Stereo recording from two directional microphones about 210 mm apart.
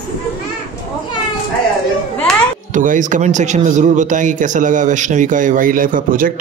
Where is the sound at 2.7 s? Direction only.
40° right (ahead or behind).